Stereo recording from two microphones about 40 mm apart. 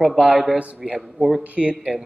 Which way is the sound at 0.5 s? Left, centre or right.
Right.